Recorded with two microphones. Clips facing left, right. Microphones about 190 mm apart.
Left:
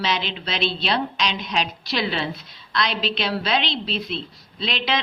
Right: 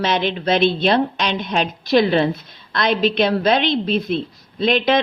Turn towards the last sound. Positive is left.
turn(degrees=-50)  # may be behind; listen again after turning